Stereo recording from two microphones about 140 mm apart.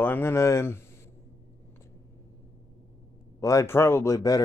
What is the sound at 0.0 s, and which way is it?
Speech, 15° left (ahead or behind).